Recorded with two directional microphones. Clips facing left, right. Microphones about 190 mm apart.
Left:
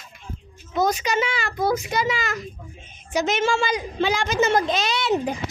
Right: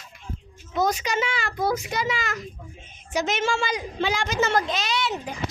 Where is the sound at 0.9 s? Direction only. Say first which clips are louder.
Left 2 dB; 10° left (ahead or behind).